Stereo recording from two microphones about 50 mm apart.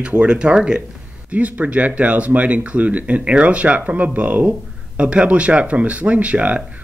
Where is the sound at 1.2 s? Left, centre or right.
Right.